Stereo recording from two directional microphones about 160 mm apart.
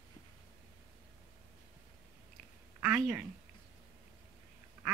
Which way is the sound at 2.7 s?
15° right (ahead or behind).